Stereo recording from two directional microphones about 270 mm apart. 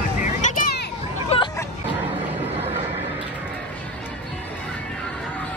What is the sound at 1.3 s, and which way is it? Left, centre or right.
Hubbub, left.